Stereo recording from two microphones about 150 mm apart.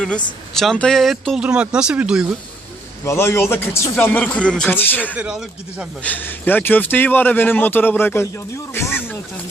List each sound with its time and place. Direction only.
0.5 s speech: 5° left (ahead or behind)
3.0 s speech: 15° left (ahead or behind)
5.1 s speech: 5° right (ahead or behind)
6.0 s speech: 10° left (ahead or behind)